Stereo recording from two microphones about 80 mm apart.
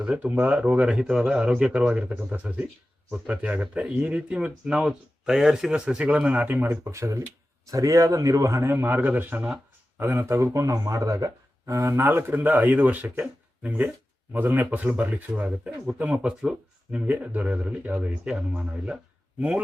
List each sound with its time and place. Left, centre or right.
0.0 s speech: centre; by 8.7 s right
8.7 s speech: right